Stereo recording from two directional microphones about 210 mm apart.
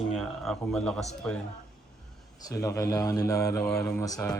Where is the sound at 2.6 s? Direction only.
15° left (ahead or behind).